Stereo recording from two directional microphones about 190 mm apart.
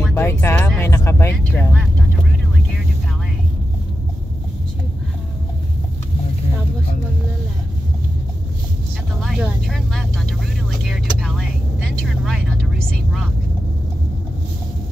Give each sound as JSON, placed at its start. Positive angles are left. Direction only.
{"t": 0.0, "sound": "music", "side_deg": 10}
{"t": 0.7, "sound": "vehicle", "side_deg": 10}
{"t": 9.2, "sound": "vehicle", "side_deg": 0}